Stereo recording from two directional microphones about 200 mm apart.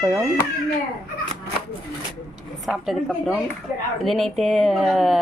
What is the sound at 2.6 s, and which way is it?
Speech, centre (ahead or behind).